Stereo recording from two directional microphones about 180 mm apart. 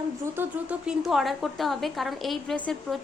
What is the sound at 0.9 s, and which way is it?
A woman's voice, centre (ahead or behind).